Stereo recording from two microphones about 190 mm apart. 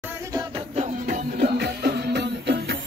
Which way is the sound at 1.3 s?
55° right (ahead or behind).